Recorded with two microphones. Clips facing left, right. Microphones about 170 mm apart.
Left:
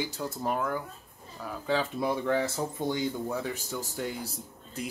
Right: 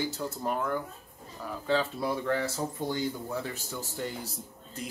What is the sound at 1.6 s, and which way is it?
Speech, 15° left (ahead or behind).